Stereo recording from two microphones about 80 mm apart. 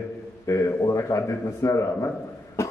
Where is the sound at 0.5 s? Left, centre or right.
Left.